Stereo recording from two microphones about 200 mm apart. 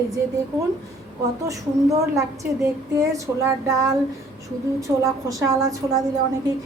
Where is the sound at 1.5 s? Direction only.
15° right (ahead or behind).